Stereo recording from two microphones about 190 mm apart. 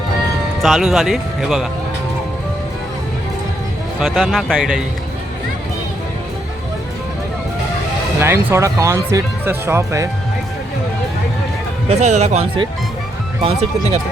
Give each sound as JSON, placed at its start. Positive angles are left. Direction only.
{"t": 0.6, "sound": "speech", "side_deg": 0}
{"t": 4.0, "sound": "speech", "side_deg": 0}
{"t": 8.2, "sound": "speech", "side_deg": -15}
{"t": 11.9, "sound": "speech", "side_deg": -35}